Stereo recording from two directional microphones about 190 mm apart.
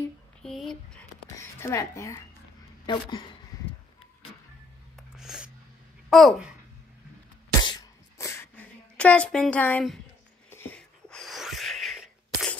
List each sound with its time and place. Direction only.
0.4 s a sound: centre (ahead or behind)
1.6 s speech: 15° left (ahead or behind)
3.5 s vehicle: 20° left (ahead or behind)
5.1 s music: 5° right (ahead or behind)
6.0 s speech: centre (ahead or behind)
7.6 s a sound: 20° left (ahead or behind); by 12.5 s centre (ahead or behind)